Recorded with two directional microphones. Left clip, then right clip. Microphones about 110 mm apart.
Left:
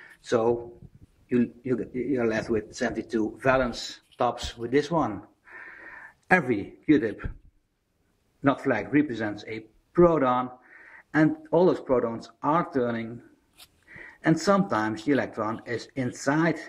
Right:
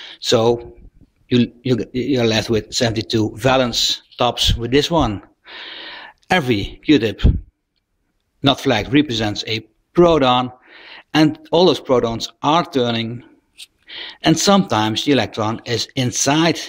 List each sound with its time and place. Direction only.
0.0 s a man's voice: 40° right (ahead or behind)
5.2 s a sound: 30° right (ahead or behind)
8.4 s a man's voice: 35° right (ahead or behind)